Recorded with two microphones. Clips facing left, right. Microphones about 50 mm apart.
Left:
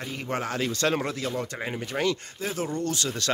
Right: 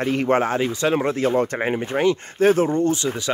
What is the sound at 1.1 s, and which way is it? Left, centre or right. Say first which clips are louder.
Speech: right 11 dB; right.